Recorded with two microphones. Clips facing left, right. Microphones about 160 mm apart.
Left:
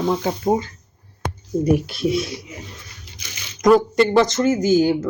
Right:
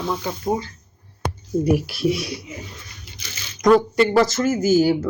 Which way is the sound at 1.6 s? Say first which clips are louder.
Left 1 dB; 5° right (ahead or behind).